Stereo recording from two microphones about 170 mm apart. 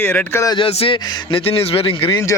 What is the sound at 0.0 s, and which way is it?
Speech, 10° left (ahead or behind).